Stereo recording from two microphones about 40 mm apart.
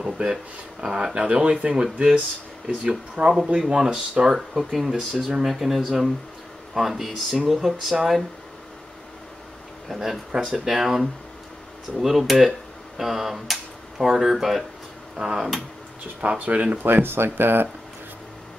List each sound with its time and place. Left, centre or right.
0.0 s speech: right
4.7 s speech: centre
9.8 s speech: centre
15.1 s speech: centre
16.2 s speech: right
16.7 s speech: right